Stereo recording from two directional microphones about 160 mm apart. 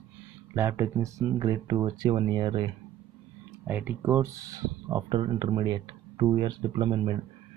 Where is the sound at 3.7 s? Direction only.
10° right (ahead or behind); by 7.2 s 30° right (ahead or behind).